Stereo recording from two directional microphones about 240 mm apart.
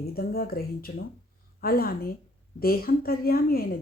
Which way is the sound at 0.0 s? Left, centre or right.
Left.